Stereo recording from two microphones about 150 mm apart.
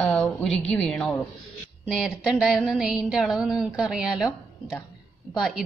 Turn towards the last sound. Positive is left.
turn(degrees=-5)  # may be behind; listen again after turning